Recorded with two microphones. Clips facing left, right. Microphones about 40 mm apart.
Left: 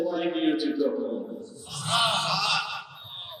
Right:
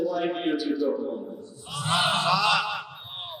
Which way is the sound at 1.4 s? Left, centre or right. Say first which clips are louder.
Right 4 dB; right.